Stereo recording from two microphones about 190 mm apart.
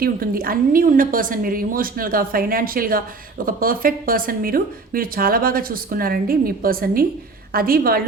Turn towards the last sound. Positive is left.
turn(degrees=-50)  # may be behind; listen again after turning